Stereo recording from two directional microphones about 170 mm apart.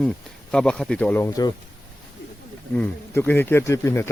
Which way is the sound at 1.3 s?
20° left (ahead or behind).